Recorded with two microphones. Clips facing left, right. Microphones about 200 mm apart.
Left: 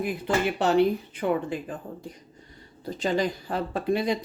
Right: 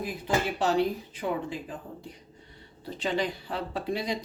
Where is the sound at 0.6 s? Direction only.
60° left (ahead or behind).